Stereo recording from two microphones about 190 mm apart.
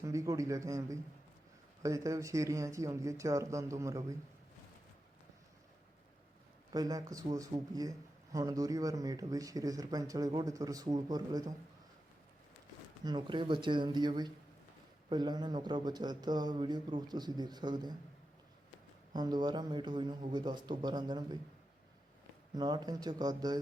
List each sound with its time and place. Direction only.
0.0 s speech: 15° right (ahead or behind)
6.7 s speech: 20° right (ahead or behind)
13.1 s speech: 25° right (ahead or behind)
19.1 s speech: 20° right (ahead or behind)
22.5 s speech: 20° right (ahead or behind)